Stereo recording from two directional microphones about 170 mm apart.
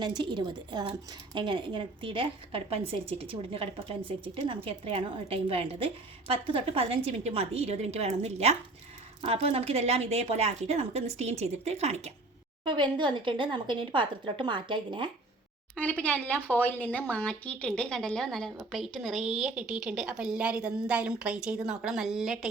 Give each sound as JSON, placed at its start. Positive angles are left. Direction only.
{"t": 0.0, "sound": "a woman's voice", "side_deg": -25}
{"t": 12.6, "sound": "speech", "side_deg": -30}
{"t": 15.7, "sound": "speech", "side_deg": 10}